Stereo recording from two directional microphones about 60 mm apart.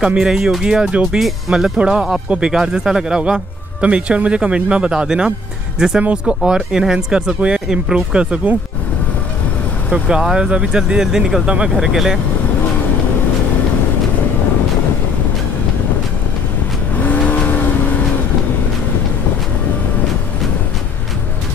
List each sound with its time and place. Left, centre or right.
0.0 s speech: centre
10.0 s speech: centre
11.4 s speech: centre
11.7 s speech: centre
16.9 s vehicle: left